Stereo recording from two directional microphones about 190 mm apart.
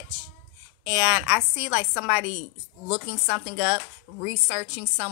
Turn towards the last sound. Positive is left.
turn(degrees=-15)  # may be behind; listen again after turning